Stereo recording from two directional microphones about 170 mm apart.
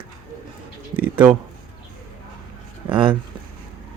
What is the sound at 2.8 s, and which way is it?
Speech, 30° right (ahead or behind).